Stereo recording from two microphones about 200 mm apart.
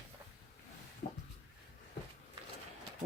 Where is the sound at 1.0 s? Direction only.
40° left (ahead or behind).